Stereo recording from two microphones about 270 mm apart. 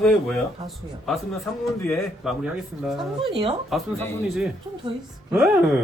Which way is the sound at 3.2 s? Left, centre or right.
Centre.